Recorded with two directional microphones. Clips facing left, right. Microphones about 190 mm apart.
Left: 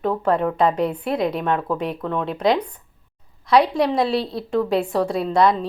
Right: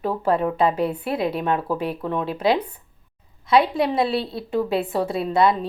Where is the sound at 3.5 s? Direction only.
Centre (ahead or behind).